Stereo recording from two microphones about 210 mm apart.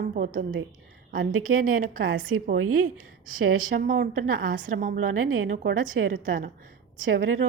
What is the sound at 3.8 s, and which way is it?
Speech, 40° right (ahead or behind).